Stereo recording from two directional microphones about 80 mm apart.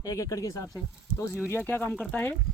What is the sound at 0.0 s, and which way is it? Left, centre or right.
Speech, left.